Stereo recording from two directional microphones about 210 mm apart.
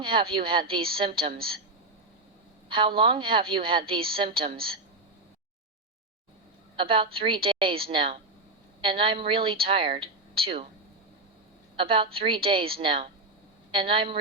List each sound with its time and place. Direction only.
0.0 s speech: 25° right (ahead or behind)
1.2 s a woman's voice: 45° right (ahead or behind)
2.6 s speech: 25° right (ahead or behind)
6.7 s speech: 25° right (ahead or behind)
11.8 s speech: 25° right (ahead or behind)